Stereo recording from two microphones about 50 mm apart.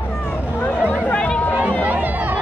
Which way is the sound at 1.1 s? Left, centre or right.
Left.